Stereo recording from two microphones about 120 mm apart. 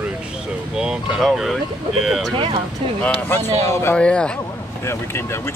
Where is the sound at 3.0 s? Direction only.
10° left (ahead or behind).